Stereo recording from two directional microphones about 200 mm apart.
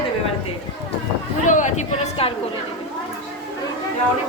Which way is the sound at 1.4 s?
40° left (ahead or behind).